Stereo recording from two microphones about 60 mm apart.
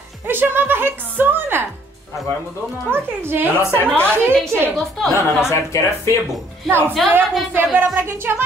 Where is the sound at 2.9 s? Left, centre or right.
Right.